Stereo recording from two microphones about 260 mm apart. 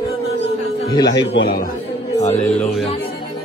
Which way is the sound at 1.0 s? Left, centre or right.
Left.